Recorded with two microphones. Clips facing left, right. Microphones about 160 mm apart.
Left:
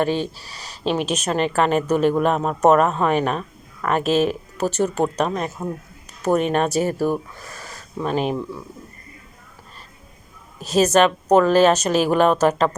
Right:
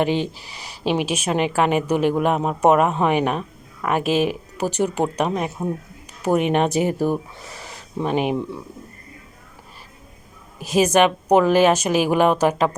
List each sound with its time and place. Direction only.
0.0 s speech: 15° right (ahead or behind)
10.6 s speech: 10° right (ahead or behind)